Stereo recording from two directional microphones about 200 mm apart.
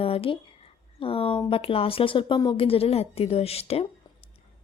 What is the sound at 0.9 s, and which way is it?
Speech, 25° left (ahead or behind).